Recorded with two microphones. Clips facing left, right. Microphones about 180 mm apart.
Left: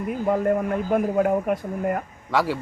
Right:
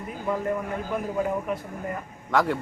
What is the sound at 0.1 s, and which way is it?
A man's voice, 55° left (ahead or behind).